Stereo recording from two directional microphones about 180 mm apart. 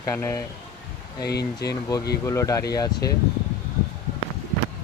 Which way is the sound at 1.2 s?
65° left (ahead or behind).